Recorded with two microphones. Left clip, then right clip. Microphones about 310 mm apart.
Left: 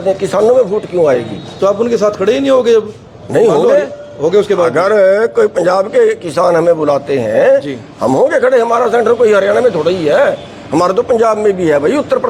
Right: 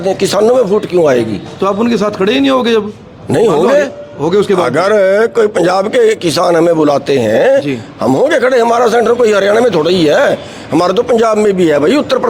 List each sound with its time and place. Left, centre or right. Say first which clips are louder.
0.0 s a man's voice: right 1 dB; right
1.6 s a man's voice: left 2 dB; right
4.2 s a man's voice: left 1 dB; right
4.6 s a man's voice: left 1 dB; right
8.0 s a man's voice: even; right